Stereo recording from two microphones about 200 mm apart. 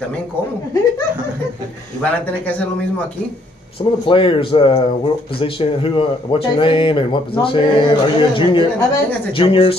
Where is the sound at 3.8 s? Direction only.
25° left (ahead or behind).